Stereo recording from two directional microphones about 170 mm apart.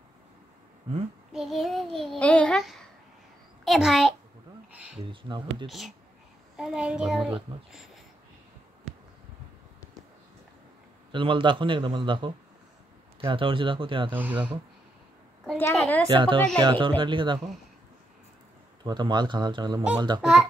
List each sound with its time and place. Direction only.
1.3 s a child's voice: centre (ahead or behind)
4.9 s a man's voice: 30° right (ahead or behind)
5.7 s a child's voice: centre (ahead or behind)
11.1 s a man's voice: 30° right (ahead or behind)
14.1 s speech: 10° right (ahead or behind)
15.7 s a child's voice: centre (ahead or behind)
16.1 s a man's voice: 30° right (ahead or behind)
18.9 s a man's voice: 25° right (ahead or behind)
20.2 s a child's voice: 5° right (ahead or behind)